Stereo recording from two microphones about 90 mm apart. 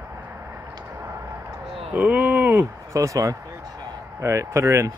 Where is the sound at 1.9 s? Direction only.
20° right (ahead or behind).